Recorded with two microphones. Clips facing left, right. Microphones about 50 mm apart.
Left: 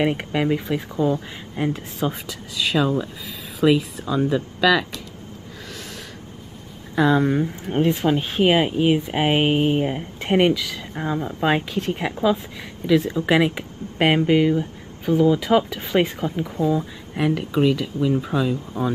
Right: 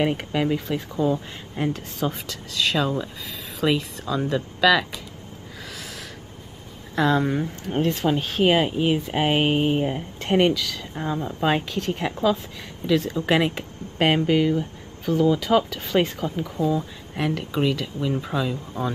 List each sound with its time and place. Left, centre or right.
0.0 s speech: centre
7.0 s speech: centre
13.3 s speech: centre
17.1 s speech: centre